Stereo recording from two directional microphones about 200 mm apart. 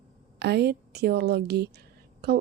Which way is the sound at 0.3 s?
55° right (ahead or behind).